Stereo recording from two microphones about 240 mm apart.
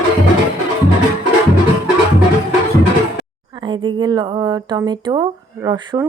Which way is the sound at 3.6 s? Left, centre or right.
Centre.